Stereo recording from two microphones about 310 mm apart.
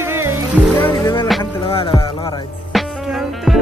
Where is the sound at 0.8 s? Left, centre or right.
Centre.